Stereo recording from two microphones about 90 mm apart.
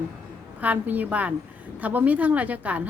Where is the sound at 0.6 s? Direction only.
20° right (ahead or behind).